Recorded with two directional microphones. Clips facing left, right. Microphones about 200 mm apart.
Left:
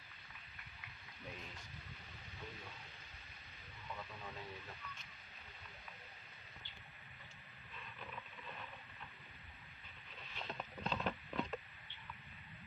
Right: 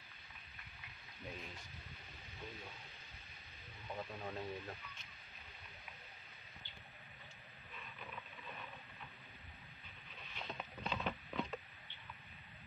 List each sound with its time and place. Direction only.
3.9 s speech: 40° right (ahead or behind)
10.3 s patter: centre (ahead or behind)